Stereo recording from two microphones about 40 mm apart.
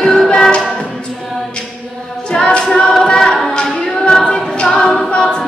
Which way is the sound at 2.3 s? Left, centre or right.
Centre.